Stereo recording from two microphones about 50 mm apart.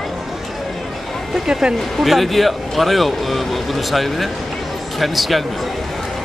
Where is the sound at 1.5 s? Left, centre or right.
Centre.